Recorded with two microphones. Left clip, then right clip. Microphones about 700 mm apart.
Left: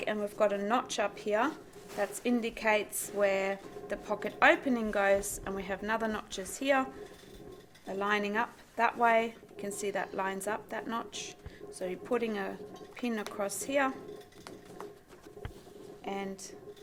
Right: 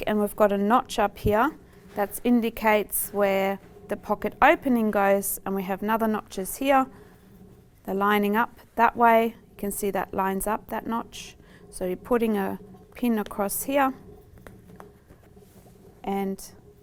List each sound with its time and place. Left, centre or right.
0.0 s a woman's voice: right
7.9 s a woman's voice: right
16.0 s speech: right